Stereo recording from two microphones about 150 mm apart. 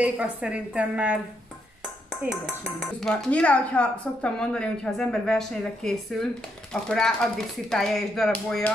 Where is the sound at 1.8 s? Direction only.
Centre (ahead or behind).